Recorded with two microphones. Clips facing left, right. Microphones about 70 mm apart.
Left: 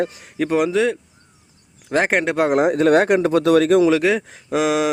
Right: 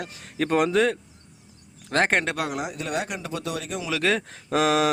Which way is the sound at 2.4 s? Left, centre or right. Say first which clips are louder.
Left 13 dB; left.